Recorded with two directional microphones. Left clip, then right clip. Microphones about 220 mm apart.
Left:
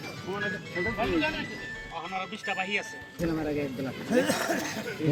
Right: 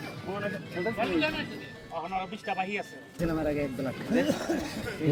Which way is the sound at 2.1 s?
50° right (ahead or behind).